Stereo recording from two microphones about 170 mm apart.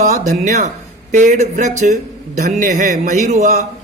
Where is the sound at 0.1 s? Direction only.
45° right (ahead or behind).